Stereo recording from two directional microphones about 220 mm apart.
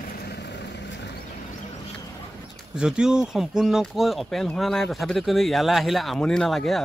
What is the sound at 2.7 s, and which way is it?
Speech, 5° right (ahead or behind).